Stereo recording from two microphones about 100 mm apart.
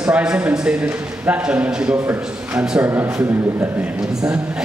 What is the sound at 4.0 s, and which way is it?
Speech, 5° right (ahead or behind).